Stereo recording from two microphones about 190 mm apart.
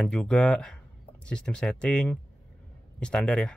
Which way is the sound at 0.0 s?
5° left (ahead or behind).